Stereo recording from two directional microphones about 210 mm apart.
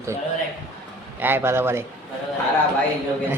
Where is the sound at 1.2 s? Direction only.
10° right (ahead or behind).